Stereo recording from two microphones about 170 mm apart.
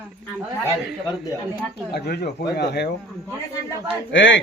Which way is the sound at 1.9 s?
70° left (ahead or behind).